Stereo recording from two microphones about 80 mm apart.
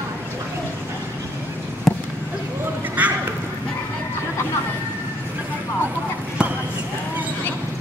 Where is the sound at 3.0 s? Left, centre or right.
Centre.